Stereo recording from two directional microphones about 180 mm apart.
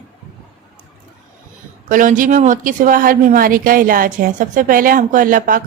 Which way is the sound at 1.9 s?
45° right (ahead or behind).